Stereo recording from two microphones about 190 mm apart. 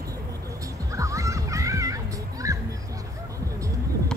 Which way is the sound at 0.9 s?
15° right (ahead or behind).